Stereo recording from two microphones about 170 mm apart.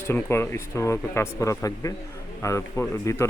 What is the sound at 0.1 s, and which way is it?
Speech, 15° left (ahead or behind).